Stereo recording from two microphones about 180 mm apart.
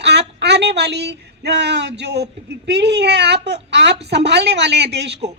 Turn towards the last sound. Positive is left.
turn(degrees=-70)  # may be behind; listen again after turning